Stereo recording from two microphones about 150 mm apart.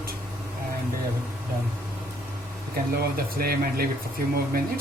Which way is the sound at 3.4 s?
90° right.